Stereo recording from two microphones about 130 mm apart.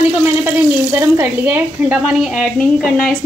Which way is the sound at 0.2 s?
15° right (ahead or behind).